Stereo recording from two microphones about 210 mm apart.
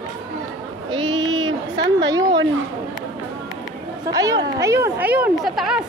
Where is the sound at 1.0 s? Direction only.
60° right (ahead or behind).